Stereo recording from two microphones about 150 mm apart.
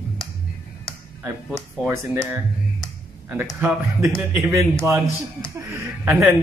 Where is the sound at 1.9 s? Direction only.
20° right (ahead or behind).